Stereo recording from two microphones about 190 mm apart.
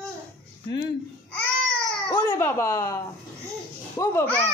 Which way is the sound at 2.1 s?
20° left (ahead or behind).